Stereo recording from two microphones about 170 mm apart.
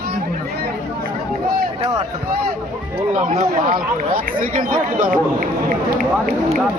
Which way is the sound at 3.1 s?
55° right (ahead or behind).